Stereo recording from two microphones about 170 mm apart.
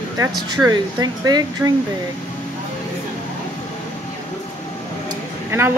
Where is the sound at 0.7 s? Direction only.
25° right (ahead or behind).